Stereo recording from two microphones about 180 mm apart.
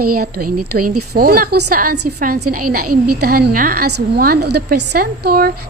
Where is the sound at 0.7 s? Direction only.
55° right (ahead or behind).